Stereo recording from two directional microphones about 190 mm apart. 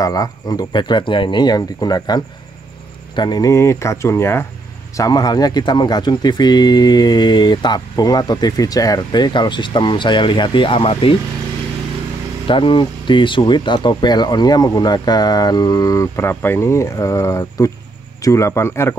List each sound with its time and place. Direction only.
0.0 s speech: 20° left (ahead or behind)
12.4 s speech: 25° left (ahead or behind)